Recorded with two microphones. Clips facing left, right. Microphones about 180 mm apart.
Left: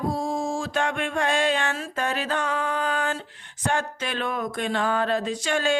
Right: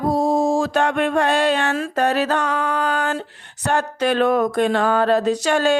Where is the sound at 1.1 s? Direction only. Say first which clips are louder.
Right 6 dB; 65° right (ahead or behind).